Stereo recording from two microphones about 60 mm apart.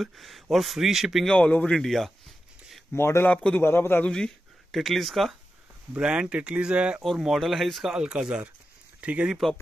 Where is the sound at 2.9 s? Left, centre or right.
Left.